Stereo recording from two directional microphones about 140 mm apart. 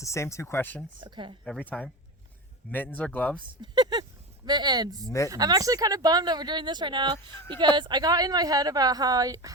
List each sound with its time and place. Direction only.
0.0 s speech: 20° left (ahead or behind)
0.9 s speech: 35° right (ahead or behind)
1.5 s speech: 10° left (ahead or behind)
3.6 s speech: 30° right (ahead or behind)
7.3 s speech: 10° left (ahead or behind)
7.8 s speech: 30° right (ahead or behind)